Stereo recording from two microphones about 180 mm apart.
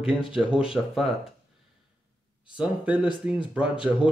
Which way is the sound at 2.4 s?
5° right (ahead or behind).